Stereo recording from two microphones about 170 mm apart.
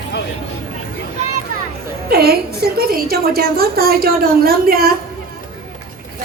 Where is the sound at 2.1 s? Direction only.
65° right (ahead or behind).